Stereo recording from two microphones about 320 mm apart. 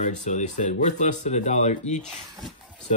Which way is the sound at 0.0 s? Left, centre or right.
Left.